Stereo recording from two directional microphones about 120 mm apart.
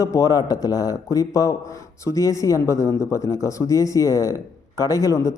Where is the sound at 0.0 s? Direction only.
30° left (ahead or behind).